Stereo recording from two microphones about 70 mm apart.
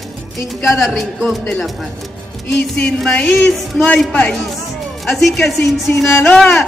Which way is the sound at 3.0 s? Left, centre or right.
Centre.